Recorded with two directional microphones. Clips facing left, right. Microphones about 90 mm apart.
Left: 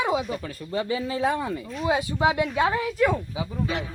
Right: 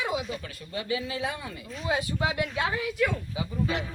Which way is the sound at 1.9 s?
25° left (ahead or behind).